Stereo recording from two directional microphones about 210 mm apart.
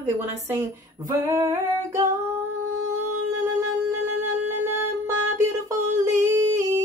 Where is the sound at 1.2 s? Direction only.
15° right (ahead or behind).